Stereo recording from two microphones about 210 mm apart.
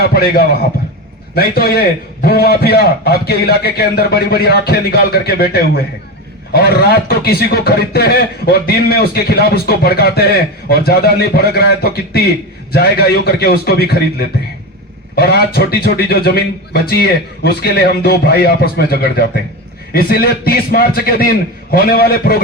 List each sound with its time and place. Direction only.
0.0 s a man's voice: 50° left (ahead or behind)
6.5 s a man's voice: 50° left (ahead or behind)